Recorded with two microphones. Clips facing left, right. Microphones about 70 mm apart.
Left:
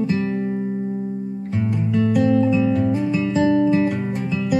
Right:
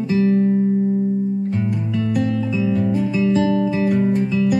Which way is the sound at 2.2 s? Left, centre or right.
Centre.